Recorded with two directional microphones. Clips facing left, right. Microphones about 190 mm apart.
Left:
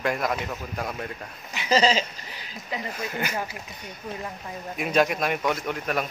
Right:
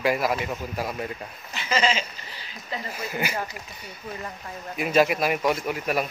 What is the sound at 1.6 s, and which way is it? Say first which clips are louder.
Speech: left 3 dB; 35° left (ahead or behind).